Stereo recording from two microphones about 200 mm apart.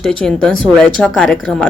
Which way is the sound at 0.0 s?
5° left (ahead or behind).